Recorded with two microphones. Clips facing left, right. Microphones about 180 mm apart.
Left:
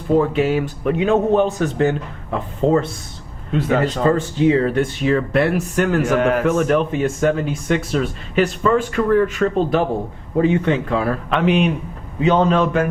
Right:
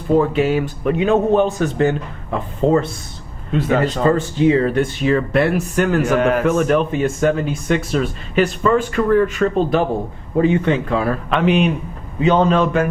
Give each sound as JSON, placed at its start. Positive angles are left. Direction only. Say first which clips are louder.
{"t": 0.2, "sound": "a man's voice", "louder": "right 1 dB", "side_deg": -15}
{"t": 2.6, "sound": "speech", "louder": "right 1 dB", "side_deg": -55}
{"t": 3.7, "sound": "a man's voice", "louder": "right 1 dB", "side_deg": -15}
{"t": 10.4, "sound": "speech", "louder": "right 1 dB", "side_deg": -15}